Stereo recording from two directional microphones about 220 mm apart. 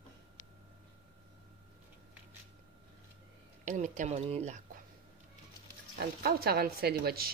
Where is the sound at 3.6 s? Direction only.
35° right (ahead or behind).